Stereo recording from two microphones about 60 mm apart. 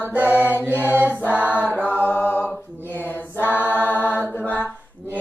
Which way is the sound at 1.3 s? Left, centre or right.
Right.